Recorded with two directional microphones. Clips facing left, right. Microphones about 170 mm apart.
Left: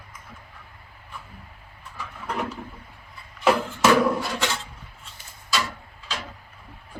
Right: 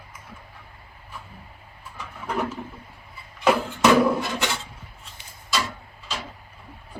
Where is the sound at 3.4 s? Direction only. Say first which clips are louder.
Right 1 dB; 5° right (ahead or behind).